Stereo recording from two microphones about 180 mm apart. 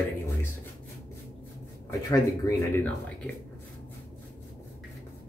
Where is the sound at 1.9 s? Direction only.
15° left (ahead or behind).